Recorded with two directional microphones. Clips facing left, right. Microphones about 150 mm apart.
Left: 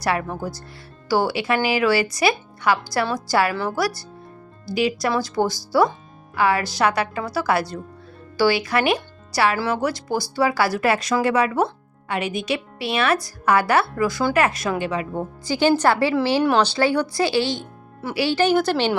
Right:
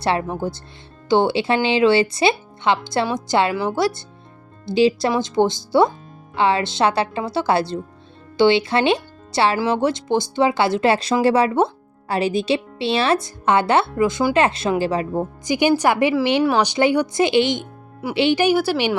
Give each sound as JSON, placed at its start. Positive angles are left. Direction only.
{"t": 0.0, "sound": "speech", "side_deg": -25}
{"t": 15.2, "sound": "speech", "side_deg": -15}
{"t": 16.4, "sound": "speech", "side_deg": -5}
{"t": 16.6, "sound": "speech", "side_deg": -15}